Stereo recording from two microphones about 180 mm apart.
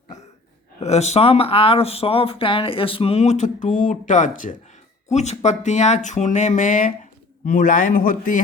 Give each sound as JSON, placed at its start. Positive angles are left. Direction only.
{"t": 0.8, "sound": "speech", "side_deg": 35}